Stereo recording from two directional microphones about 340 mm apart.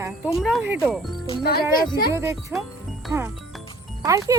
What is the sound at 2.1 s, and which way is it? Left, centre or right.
Speech, centre.